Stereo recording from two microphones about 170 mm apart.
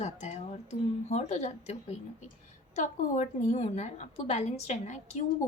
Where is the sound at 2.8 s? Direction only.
50° left (ahead or behind).